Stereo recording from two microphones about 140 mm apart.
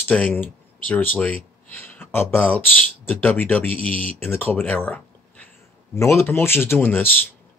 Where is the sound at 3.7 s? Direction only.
40° right (ahead or behind).